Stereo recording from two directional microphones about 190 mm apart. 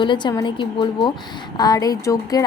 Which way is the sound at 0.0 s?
25° left (ahead or behind).